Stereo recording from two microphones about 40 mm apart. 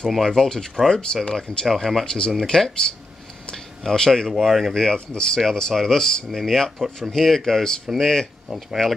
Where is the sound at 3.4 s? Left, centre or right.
Centre.